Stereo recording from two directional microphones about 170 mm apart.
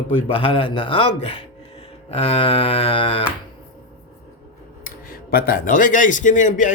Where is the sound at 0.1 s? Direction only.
30° left (ahead or behind).